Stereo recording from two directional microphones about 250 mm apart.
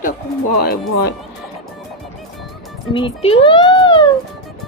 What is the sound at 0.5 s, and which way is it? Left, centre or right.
Speech, left.